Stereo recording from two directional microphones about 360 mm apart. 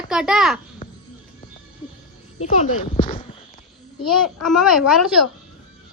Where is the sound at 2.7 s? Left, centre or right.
Centre.